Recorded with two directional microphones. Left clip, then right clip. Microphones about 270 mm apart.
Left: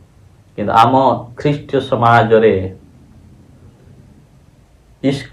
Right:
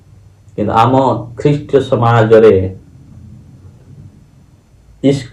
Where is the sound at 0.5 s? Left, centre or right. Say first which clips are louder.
Even; left.